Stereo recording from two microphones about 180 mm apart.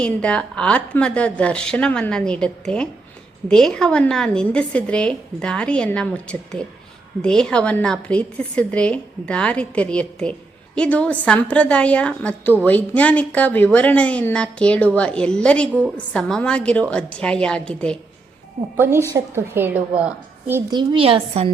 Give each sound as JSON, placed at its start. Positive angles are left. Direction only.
{"t": 0.0, "sound": "a woman's voice", "side_deg": 5}
{"t": 18.8, "sound": "a woman's voice", "side_deg": -15}
{"t": 20.7, "sound": "a woman's voice", "side_deg": -25}